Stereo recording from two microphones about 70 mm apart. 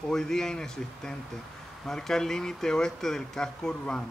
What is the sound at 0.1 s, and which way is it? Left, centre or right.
Speech, centre.